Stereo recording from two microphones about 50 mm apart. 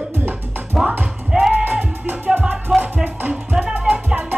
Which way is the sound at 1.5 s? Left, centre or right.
Right.